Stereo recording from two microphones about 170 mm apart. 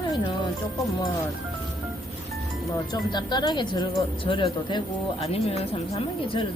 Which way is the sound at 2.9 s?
25° left (ahead or behind).